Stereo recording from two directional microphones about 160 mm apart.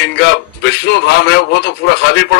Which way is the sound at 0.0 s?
90° left.